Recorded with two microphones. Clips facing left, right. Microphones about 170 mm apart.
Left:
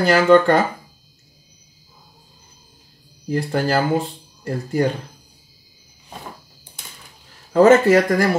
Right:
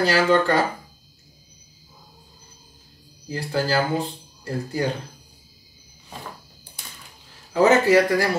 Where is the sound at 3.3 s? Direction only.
55° left (ahead or behind).